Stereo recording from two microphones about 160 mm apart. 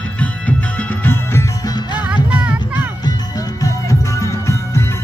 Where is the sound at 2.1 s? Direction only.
10° right (ahead or behind).